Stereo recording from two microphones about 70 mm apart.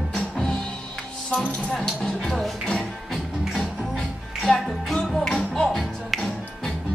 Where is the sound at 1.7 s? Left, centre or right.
Centre.